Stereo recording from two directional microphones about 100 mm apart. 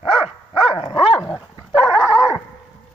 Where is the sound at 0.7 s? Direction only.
65° left (ahead or behind).